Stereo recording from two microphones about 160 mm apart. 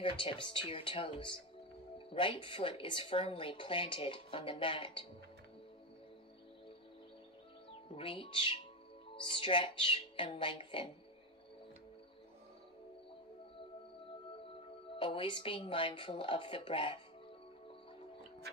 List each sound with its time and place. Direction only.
0.0 s speech: 30° left (ahead or behind)
7.9 s speech: 30° left (ahead or behind)
15.0 s speech: 30° left (ahead or behind)